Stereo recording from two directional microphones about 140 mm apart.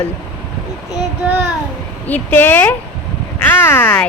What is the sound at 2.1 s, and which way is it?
Speech, 15° left (ahead or behind).